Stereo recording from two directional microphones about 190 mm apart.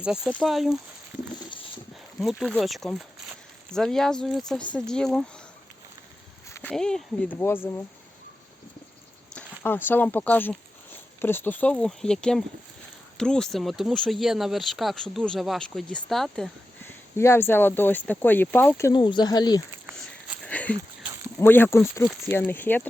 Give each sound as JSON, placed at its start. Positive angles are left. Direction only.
{"t": 0.0, "sound": "speech", "side_deg": -5}
{"t": 2.2, "sound": "speech", "side_deg": 0}
{"t": 6.5, "sound": "speech", "side_deg": 10}
{"t": 9.3, "sound": "speech", "side_deg": 10}
{"t": 18.8, "sound": "speech", "side_deg": 20}
{"t": 20.4, "sound": "a sound", "side_deg": 5}
{"t": 21.3, "sound": "speech", "side_deg": 10}